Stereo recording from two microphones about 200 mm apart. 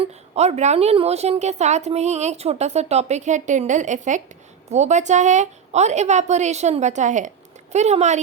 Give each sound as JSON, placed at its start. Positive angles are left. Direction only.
{"t": 0.0, "sound": "a woman's voice", "side_deg": -35}